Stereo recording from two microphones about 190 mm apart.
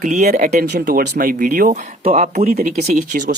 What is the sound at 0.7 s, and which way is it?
Speech, 55° right (ahead or behind).